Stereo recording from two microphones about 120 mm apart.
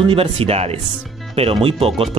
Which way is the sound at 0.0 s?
50° right (ahead or behind).